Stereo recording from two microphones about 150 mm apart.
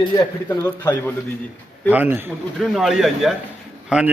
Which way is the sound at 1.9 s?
15° right (ahead or behind).